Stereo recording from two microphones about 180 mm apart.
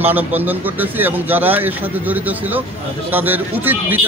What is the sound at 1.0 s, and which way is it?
Speech, 10° right (ahead or behind).